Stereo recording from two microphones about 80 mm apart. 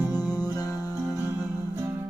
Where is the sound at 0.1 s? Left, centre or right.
Left.